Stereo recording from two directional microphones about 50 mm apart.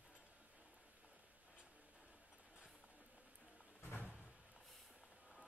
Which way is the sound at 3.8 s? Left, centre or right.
Left.